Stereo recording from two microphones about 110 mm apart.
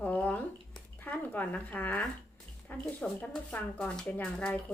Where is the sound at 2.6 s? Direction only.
10° left (ahead or behind).